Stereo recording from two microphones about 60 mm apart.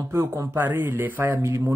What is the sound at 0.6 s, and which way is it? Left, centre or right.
Speech, right.